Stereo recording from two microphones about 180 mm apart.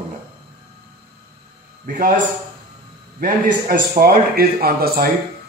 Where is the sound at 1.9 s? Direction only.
50° right (ahead or behind).